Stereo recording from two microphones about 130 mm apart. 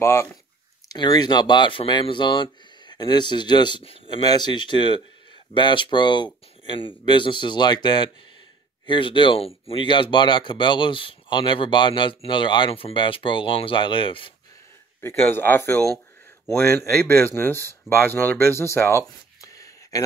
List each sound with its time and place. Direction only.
0.0 s speech: 20° left (ahead or behind); by 14.3 s 40° left (ahead or behind)
15.0 s speech: 15° left (ahead or behind)